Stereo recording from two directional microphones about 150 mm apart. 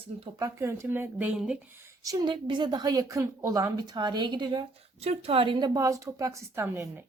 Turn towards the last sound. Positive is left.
turn(degrees=-15)  # may be behind; listen again after turning